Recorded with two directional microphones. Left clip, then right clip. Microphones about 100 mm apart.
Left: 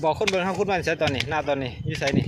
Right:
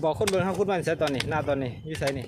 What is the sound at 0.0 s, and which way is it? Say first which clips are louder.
Speech: left 2 dB; 10° right (ahead or behind).